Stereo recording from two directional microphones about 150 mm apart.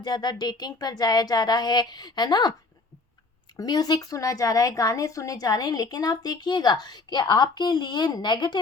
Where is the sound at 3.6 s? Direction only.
25° left (ahead or behind).